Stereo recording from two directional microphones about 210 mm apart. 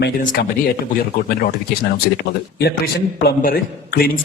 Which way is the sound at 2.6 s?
50° left (ahead or behind).